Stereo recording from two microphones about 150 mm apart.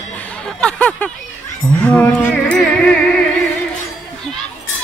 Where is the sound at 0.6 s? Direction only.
10° left (ahead or behind).